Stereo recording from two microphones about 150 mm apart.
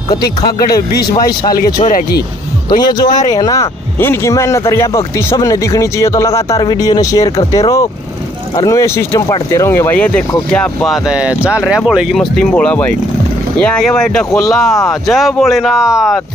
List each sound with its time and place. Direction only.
1.1 s speech: 25° left (ahead or behind)
1.9 s speech: 80° left
2.8 s speech: 25° left (ahead or behind); by 11.0 s 5° left (ahead or behind)
11.1 s speech: 5° right (ahead or behind)